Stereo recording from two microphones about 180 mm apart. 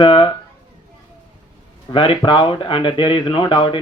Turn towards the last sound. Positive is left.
turn(degrees=30)  # may be behind; listen again after turning